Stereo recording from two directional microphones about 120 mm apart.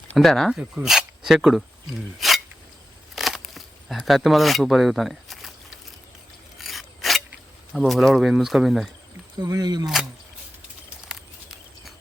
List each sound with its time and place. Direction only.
0.1 s speech: centre (ahead or behind)
2.1 s a sound: centre (ahead or behind)
3.2 s camera: centre (ahead or behind)
6.6 s filing: centre (ahead or behind)
7.7 s speech: centre (ahead or behind)
9.4 s speech: 35° right (ahead or behind)
11.1 s a sound: centre (ahead or behind)